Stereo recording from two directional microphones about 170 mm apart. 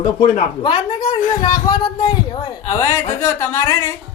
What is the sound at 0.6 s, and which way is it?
Speech, 30° left (ahead or behind).